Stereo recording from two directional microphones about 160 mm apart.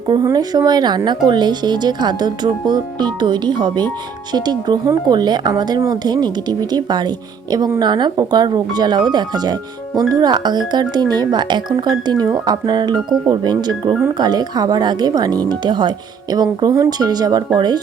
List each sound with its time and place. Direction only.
0.1 s speech: 25° right (ahead or behind)